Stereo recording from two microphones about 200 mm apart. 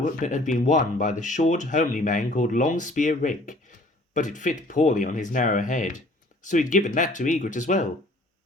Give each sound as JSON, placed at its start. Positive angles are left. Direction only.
{"t": 0.0, "sound": "speech", "side_deg": 40}